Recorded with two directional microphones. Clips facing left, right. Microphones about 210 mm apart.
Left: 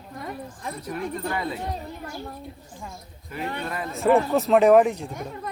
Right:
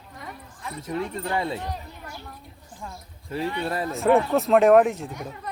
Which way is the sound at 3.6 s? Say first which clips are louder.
Right 4 dB; 35° right (ahead or behind).